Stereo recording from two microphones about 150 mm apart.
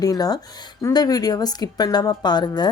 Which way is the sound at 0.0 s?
25° left (ahead or behind).